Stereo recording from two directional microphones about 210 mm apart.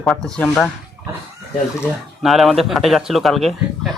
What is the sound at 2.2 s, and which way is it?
Speech, centre (ahead or behind).